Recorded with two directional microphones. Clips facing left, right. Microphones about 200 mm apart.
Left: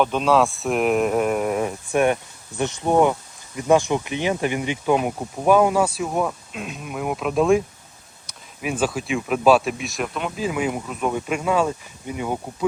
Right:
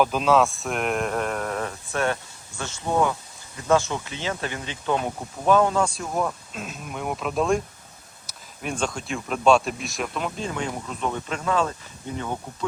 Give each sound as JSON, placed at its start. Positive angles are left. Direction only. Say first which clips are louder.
{"t": 0.0, "sound": "speech", "louder": "left 1 dB", "side_deg": 0}